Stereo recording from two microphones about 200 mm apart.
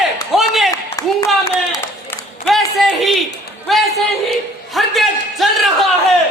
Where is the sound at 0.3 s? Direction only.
Centre (ahead or behind).